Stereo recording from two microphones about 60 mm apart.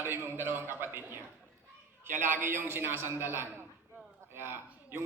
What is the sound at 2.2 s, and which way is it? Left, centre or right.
A man's voice, right.